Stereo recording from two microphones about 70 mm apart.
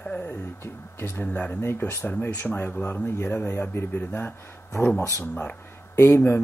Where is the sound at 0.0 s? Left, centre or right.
Centre.